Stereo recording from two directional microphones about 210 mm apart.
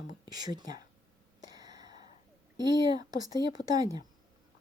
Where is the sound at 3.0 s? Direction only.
20° right (ahead or behind).